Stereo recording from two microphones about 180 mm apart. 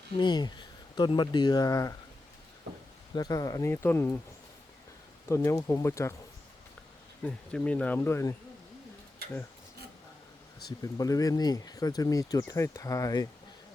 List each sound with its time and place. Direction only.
0.2 s speech: 25° left (ahead or behind)
3.2 s speech: 20° left (ahead or behind)
5.3 s speech: 15° left (ahead or behind)
7.3 s speech: 5° left (ahead or behind)
10.7 s speech: 20° left (ahead or behind)